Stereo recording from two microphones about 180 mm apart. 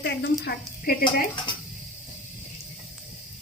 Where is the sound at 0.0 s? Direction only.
70° left (ahead or behind).